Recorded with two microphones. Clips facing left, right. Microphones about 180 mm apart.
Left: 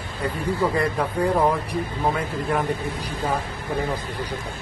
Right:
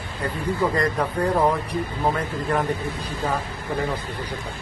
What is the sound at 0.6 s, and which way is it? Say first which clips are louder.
A man's voice: even; 10° left (ahead or behind).